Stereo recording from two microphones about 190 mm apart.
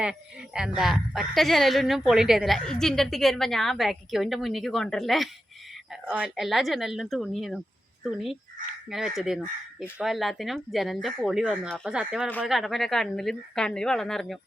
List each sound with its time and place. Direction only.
0.0 s speech: 5° right (ahead or behind)